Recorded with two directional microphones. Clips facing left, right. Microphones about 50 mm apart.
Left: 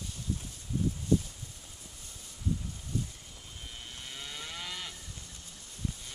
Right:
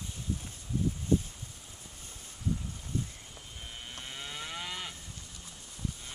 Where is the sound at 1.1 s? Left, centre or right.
Right.